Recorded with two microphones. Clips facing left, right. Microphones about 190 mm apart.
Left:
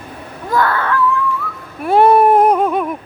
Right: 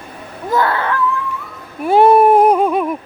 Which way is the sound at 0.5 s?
25° right (ahead or behind).